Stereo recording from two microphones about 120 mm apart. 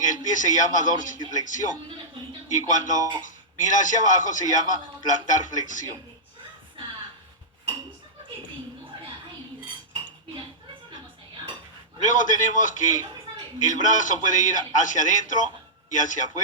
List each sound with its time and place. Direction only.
0.3 s a man's voice: 90° left
12.0 s a man's voice: 90° left